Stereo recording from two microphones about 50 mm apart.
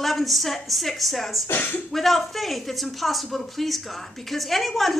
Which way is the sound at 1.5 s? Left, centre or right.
Left.